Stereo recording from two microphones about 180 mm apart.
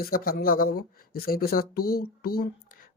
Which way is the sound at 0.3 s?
50° left (ahead or behind).